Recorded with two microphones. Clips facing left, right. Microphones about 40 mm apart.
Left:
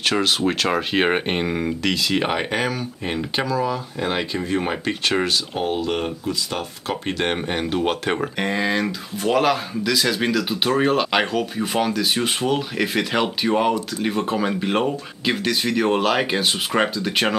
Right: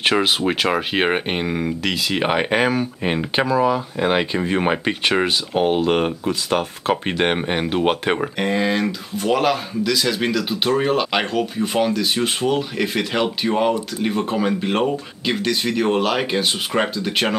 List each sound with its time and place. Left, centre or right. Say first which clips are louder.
0.0 s speech: right 2 dB; centre
8.4 s speech: right 2 dB; centre